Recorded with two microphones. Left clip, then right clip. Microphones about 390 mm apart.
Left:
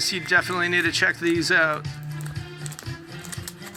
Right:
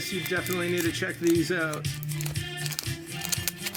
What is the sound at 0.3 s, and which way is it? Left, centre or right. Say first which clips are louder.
Speech: left 9 dB; centre.